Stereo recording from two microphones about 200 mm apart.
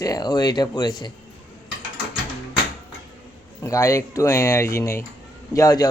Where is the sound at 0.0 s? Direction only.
20° left (ahead or behind).